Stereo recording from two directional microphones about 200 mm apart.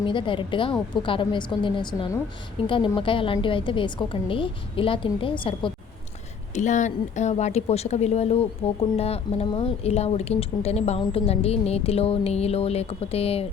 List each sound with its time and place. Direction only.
0.0 s a woman's voice: 25° left (ahead or behind)
6.5 s speech: 35° left (ahead or behind)